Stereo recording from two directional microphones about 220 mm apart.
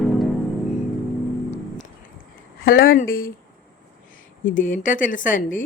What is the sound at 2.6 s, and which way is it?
Speech, 40° left (ahead or behind).